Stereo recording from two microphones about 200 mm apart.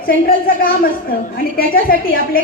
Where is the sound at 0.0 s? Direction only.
45° left (ahead or behind).